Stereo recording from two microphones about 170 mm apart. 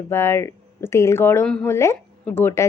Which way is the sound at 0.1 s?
15° left (ahead or behind).